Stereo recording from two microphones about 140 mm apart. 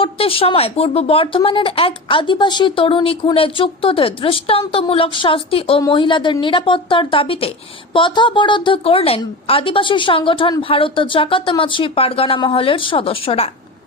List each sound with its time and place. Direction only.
0.0 s speech: 40° left (ahead or behind)